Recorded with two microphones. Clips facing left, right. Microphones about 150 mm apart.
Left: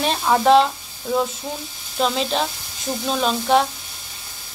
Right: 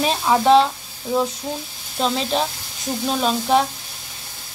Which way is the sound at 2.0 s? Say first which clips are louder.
Even; centre (ahead or behind).